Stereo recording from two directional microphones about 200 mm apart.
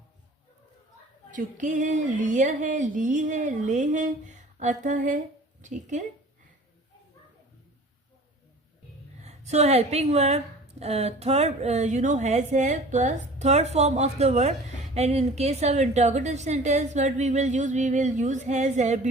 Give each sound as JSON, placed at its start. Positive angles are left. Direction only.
{"t": 1.3, "sound": "a woman's voice", "side_deg": -40}
{"t": 9.2, "sound": "a woman's voice", "side_deg": -35}